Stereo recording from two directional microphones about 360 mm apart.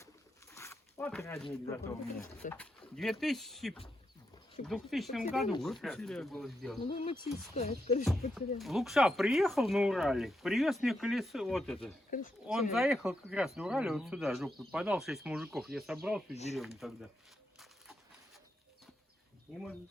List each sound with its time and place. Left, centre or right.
0.5 s speech: centre
6.8 s speech: centre
8.5 s speech: centre
12.1 s speech: left
12.7 s speech: centre
16.3 s speech: centre
16.6 s speech: centre